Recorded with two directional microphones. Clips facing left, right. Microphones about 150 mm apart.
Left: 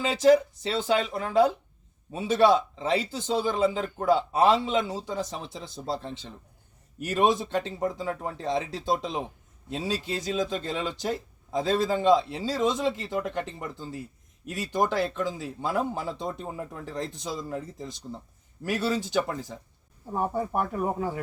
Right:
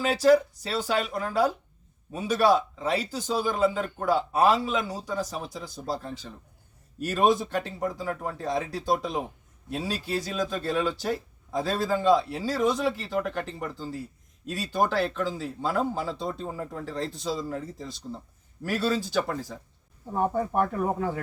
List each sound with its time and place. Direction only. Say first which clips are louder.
0.0 s speech: even; 20° left (ahead or behind)
20.1 s speech: right 2 dB; 10° left (ahead or behind)